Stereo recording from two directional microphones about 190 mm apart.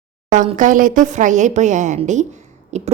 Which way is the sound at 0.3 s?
40° right (ahead or behind).